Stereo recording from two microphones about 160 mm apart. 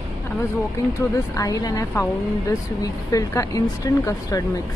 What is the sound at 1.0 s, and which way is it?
Speech, 20° left (ahead or behind).